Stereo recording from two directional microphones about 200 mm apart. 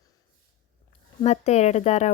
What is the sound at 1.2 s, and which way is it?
Speech, 35° left (ahead or behind).